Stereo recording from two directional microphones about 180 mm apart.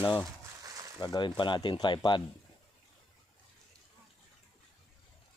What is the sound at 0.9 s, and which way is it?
Speech, 25° left (ahead or behind).